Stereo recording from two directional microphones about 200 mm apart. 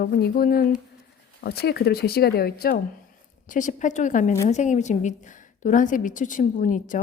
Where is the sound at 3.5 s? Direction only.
40° left (ahead or behind).